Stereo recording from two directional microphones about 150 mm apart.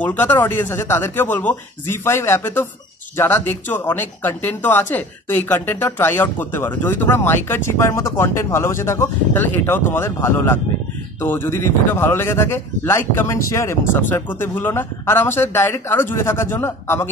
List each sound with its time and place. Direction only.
0.0 s speech: 10° left (ahead or behind)